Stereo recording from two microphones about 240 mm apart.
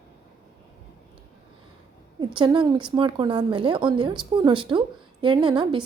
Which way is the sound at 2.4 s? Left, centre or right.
Centre.